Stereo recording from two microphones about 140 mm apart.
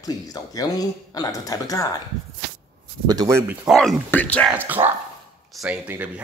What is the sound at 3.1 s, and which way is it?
Speech, 30° right (ahead or behind).